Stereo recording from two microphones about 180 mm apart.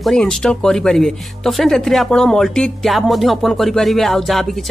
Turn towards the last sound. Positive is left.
turn(degrees=0)  # may be behind; listen again after turning